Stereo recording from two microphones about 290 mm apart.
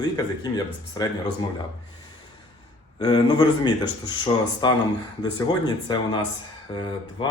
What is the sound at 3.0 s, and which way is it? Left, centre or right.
Speech, centre.